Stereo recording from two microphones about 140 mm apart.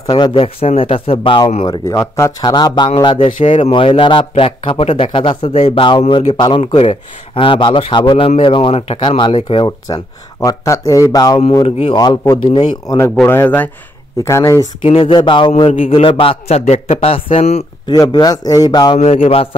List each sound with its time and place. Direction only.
0.0 s a man's voice: 30° left (ahead or behind)
1.7 s a man's voice: 20° left (ahead or behind); by 9.7 s 35° left (ahead or behind)
9.7 s speech: 25° left (ahead or behind)
11.6 s a man's voice: 45° left (ahead or behind)
12.0 s speech: 30° left (ahead or behind)
14.8 s a man's voice: 40° left (ahead or behind)
17.8 s speech: 30° left (ahead or behind)
18.9 s a man's voice: 50° left (ahead or behind)